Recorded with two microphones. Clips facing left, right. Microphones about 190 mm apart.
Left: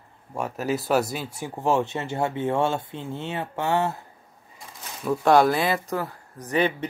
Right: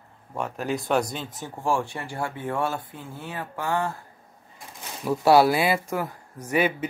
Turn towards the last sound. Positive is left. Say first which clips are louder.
# even
turn(degrees=-10)  # may be behind; listen again after turning